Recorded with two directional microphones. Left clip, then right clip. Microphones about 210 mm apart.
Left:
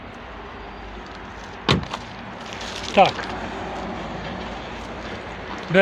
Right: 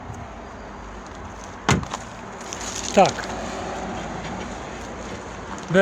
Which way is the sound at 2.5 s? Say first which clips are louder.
Even; 25° right (ahead or behind).